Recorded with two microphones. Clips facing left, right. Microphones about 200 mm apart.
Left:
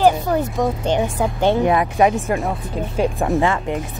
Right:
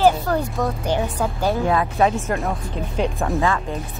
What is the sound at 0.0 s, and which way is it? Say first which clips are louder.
Speech: left 2 dB; 20° left (ahead or behind).